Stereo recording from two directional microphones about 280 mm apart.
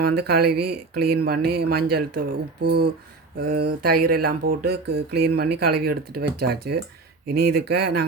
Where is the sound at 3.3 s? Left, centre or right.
Right.